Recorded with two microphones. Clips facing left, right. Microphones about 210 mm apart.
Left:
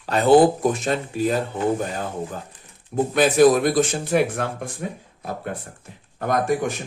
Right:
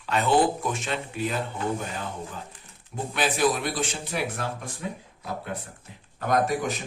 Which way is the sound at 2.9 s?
45° left (ahead or behind).